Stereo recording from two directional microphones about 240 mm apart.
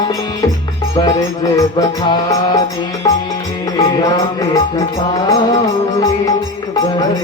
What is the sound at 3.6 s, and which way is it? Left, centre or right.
Music, centre.